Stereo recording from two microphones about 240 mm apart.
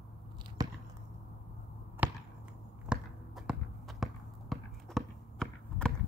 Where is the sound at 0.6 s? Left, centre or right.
Centre.